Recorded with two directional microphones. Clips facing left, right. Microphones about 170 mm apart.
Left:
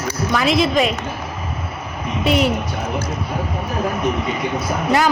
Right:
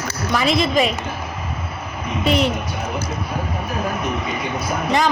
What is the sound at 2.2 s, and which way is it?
Speech, 5° left (ahead or behind).